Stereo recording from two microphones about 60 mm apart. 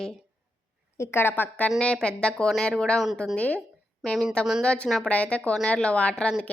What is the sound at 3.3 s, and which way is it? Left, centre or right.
Speech, left.